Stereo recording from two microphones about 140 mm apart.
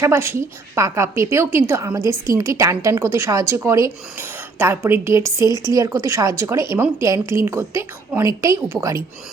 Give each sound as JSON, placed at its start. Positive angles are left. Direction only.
{"t": 0.0, "sound": "a woman's voice", "side_deg": -20}